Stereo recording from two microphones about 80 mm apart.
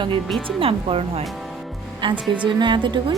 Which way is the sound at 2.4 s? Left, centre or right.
Right.